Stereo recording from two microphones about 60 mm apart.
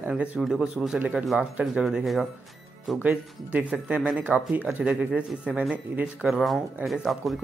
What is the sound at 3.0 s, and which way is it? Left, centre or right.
Speech, right.